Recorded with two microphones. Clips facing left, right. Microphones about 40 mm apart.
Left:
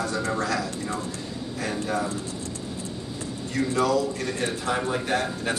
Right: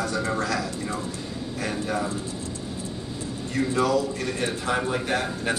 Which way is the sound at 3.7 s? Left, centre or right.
Centre.